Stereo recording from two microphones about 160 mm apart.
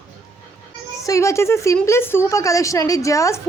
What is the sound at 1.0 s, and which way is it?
A woman's voice, 20° left (ahead or behind).